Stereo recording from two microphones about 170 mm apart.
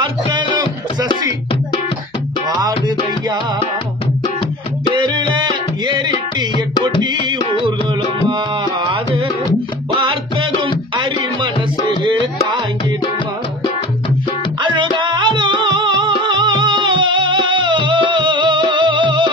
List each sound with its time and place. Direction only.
4.9 s music: 25° right (ahead or behind)
6.8 s music: 30° right (ahead or behind)
14.6 s music: 30° right (ahead or behind)